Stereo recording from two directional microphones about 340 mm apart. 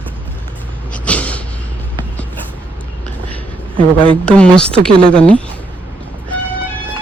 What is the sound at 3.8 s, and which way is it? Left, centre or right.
Speech, centre.